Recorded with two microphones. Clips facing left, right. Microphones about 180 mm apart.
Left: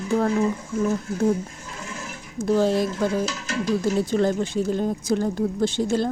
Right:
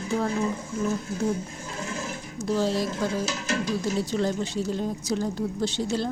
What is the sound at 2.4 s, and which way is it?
Speech, 55° left (ahead or behind).